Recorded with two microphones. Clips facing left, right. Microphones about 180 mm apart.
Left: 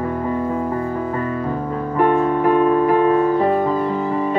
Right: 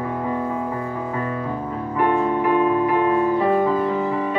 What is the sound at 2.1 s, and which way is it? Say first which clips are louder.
Music: left 2 dB; 45° left (ahead or behind).